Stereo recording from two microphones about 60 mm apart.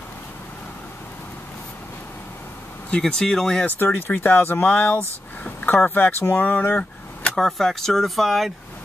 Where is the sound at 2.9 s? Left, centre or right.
Centre.